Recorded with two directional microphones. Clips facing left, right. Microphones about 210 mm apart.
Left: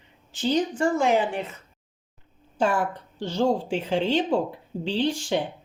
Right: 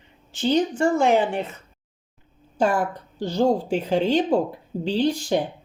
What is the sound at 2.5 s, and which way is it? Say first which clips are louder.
A woman's voice: right 2 dB; 40° right (ahead or behind).